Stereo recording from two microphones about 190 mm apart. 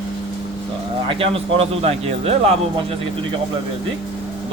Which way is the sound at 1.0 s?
30° right (ahead or behind).